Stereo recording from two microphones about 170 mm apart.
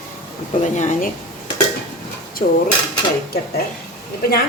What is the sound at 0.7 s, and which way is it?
Speech, 45° left (ahead or behind).